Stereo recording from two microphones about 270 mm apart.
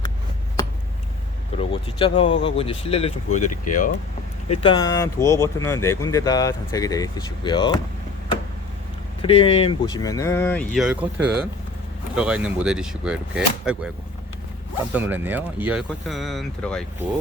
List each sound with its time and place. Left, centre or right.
1.5 s speech: centre
9.2 s speech: left; by 13.9 s centre
14.9 s speech: centre